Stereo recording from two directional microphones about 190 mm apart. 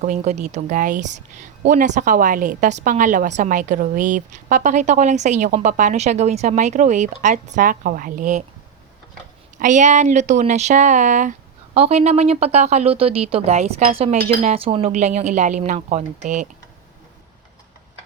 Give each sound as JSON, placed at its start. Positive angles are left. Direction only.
{"t": 0.0, "sound": "speech", "side_deg": -40}
{"t": 9.6, "sound": "speech", "side_deg": -40}